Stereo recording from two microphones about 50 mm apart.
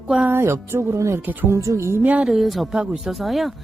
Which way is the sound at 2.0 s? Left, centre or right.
Right.